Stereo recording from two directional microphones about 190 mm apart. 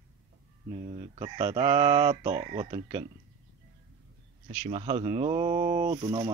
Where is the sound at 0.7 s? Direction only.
30° right (ahead or behind).